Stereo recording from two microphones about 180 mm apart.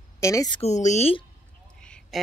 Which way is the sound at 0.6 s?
40° left (ahead or behind).